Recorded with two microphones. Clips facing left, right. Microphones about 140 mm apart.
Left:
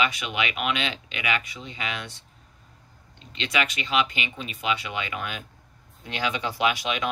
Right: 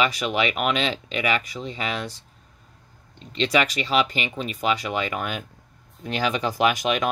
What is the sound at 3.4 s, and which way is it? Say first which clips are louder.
Speech: right 6 dB; 40° right (ahead or behind).